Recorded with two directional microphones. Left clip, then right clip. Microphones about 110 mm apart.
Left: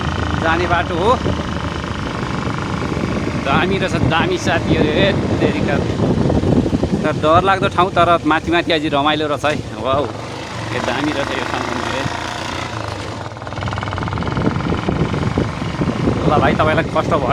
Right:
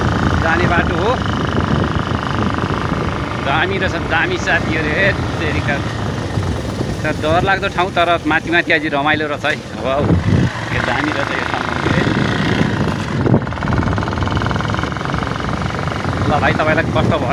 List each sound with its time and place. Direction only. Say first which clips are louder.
0.5 s speech: right 1 dB; 25° left (ahead or behind)
4.1 s speech: right 2 dB; 45° left (ahead or behind)
7.3 s speech: left 2 dB; 45° left (ahead or behind)
16.4 s speech: right 2 dB; 25° left (ahead or behind)